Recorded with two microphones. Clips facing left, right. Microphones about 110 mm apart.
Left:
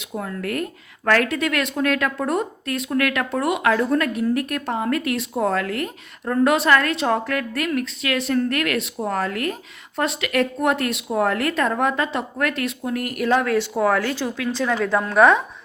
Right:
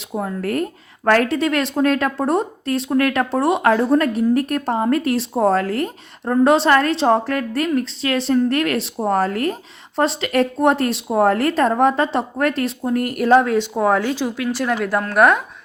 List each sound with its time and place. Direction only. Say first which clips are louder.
0.0 s speech: right 4 dB; 30° right (ahead or behind)
13.4 s a woman's voice: right 2 dB; 20° right (ahead or behind); by 15.4 s 5° right (ahead or behind)